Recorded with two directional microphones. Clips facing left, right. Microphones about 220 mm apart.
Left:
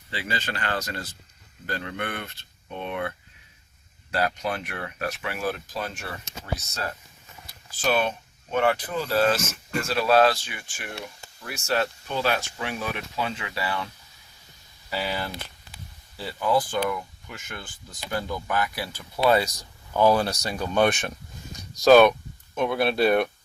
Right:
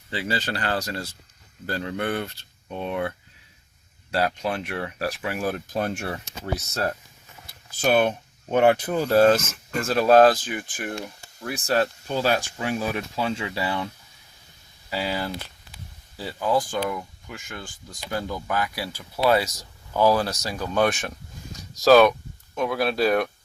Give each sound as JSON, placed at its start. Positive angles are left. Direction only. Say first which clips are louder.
{"t": 0.1, "sound": "speech", "louder": "right 4 dB", "side_deg": -40}
{"t": 4.1, "sound": "speech", "louder": "right 2 dB", "side_deg": -30}
{"t": 5.4, "sound": "speech", "louder": "right 4 dB", "side_deg": -50}
{"t": 7.8, "sound": "speech", "louder": "right 4 dB", "side_deg": -55}
{"t": 11.5, "sound": "speech", "louder": "right 3 dB", "side_deg": -35}
{"t": 14.8, "sound": "speech", "louder": "right 2 dB", "side_deg": -15}